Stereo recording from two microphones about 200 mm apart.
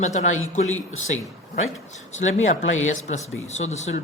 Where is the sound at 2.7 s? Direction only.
85° left.